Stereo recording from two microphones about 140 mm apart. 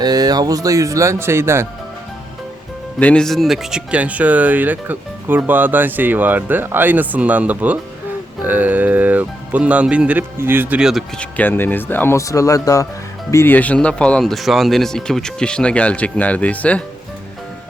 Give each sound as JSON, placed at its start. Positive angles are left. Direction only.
{"t": 0.0, "sound": "speech", "side_deg": -30}
{"t": 3.0, "sound": "speech", "side_deg": 5}
{"t": 11.2, "sound": "speech", "side_deg": 10}